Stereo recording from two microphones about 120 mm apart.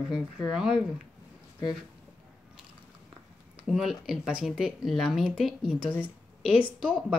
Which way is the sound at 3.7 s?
Centre (ahead or behind).